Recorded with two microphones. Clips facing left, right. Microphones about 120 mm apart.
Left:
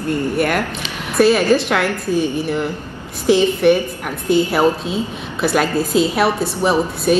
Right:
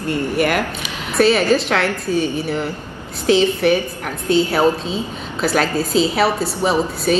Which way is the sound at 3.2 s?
5° left (ahead or behind).